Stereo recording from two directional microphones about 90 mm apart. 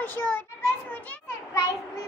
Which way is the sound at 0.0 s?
20° left (ahead or behind).